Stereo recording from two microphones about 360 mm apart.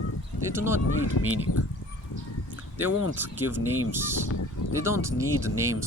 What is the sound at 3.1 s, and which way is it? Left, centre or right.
Speech, centre.